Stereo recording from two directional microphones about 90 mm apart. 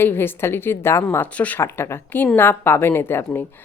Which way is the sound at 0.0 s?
25° left (ahead or behind).